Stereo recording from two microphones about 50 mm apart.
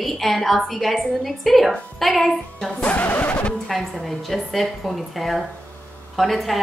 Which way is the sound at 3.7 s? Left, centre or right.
Centre.